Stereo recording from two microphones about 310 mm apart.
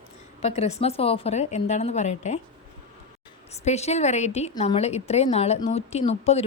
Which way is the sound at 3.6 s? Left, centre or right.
Left.